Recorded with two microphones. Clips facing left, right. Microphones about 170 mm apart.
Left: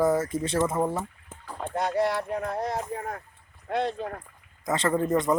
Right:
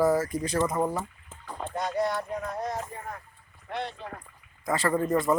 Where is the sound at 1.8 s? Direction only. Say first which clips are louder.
Left 3 dB; 60° left (ahead or behind).